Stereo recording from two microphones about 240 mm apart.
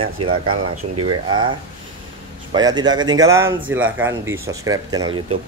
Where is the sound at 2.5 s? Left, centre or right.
Centre.